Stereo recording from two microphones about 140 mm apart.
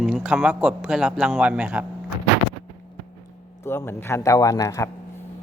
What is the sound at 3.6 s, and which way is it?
Speech, 15° left (ahead or behind).